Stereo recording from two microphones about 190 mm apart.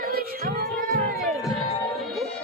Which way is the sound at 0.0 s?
50° right (ahead or behind).